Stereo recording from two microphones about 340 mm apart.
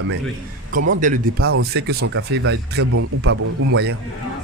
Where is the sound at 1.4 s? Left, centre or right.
Right.